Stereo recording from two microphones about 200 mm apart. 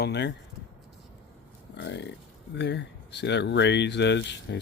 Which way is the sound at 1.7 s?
60° left (ahead or behind).